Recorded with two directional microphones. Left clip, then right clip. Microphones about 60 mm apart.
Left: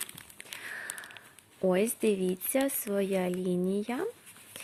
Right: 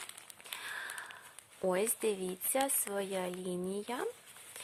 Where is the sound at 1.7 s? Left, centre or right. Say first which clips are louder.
Left 5 dB; left.